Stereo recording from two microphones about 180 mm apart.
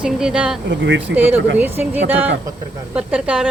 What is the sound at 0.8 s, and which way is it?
Speech, 90° right.